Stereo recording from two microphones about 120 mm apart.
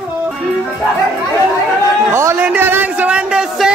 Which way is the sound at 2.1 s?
25° right (ahead or behind).